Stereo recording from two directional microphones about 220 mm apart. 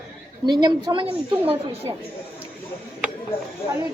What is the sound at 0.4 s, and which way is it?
A woman's voice, 20° right (ahead or behind).